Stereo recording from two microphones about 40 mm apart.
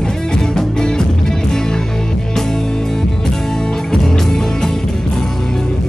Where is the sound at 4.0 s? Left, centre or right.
Centre.